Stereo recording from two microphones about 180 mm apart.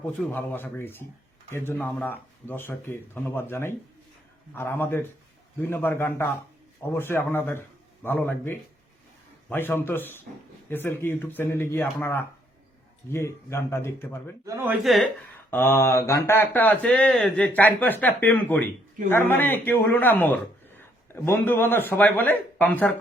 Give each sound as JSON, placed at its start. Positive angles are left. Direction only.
{"t": 0.2, "sound": "a man's voice", "side_deg": 10}
{"t": 14.4, "sound": "speech", "side_deg": -15}
{"t": 14.8, "sound": "speech", "side_deg": 0}
{"t": 15.4, "sound": "a man's voice", "side_deg": 10}